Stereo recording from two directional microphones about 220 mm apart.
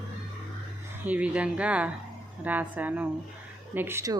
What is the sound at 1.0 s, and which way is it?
A woman's voice, 5° right (ahead or behind).